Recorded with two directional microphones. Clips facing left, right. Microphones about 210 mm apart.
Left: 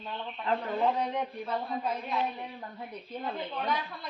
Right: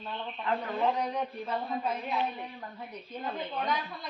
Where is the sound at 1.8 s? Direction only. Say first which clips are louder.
Even; 5° right (ahead or behind).